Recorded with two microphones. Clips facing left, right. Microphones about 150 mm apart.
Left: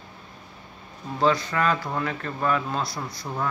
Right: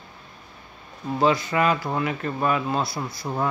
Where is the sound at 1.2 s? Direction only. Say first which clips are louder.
Right 2 dB; 10° right (ahead or behind).